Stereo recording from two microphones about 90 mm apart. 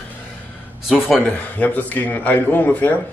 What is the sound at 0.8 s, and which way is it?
Speech, 5° right (ahead or behind).